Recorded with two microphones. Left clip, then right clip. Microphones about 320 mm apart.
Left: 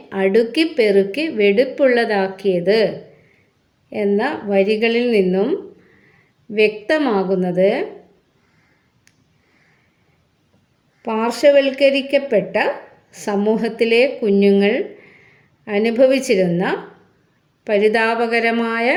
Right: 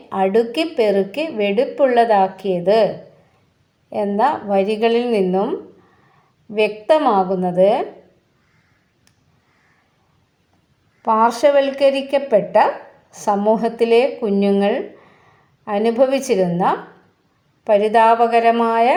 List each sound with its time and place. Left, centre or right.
0.1 s a woman's voice: centre
11.0 s a woman's voice: centre